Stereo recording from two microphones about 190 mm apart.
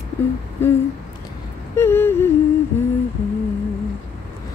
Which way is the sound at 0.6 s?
10° left (ahead or behind).